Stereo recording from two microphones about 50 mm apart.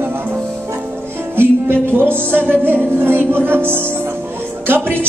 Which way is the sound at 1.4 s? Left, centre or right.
Right.